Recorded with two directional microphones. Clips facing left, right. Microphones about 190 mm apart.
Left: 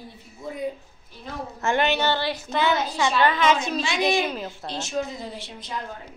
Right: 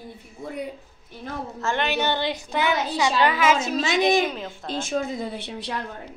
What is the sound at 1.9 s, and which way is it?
A woman's voice, 15° right (ahead or behind).